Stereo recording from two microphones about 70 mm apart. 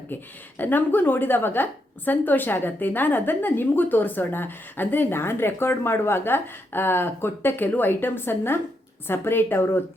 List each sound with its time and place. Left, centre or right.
0.6 s a woman's voice: left